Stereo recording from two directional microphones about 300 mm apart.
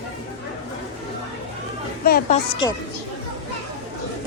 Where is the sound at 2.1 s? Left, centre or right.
Left.